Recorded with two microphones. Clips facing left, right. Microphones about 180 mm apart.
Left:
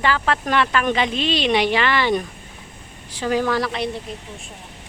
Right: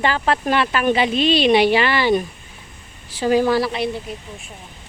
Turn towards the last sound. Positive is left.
turn(degrees=-5)  # may be behind; listen again after turning